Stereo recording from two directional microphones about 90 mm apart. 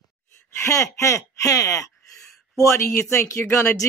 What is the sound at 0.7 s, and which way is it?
Speech, 35° left (ahead or behind).